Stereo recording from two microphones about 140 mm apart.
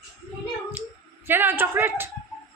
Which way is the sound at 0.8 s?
15° right (ahead or behind).